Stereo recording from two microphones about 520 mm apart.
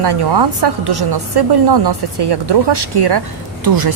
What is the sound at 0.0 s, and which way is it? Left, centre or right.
A woman's voice, right.